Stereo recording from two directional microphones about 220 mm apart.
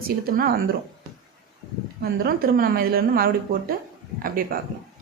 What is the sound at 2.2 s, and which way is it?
A woman's voice, 40° right (ahead or behind).